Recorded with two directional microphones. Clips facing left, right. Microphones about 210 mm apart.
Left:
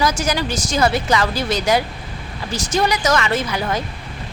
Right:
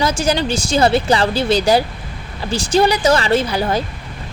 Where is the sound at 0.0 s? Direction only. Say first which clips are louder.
Right 3 dB; 30° right (ahead or behind).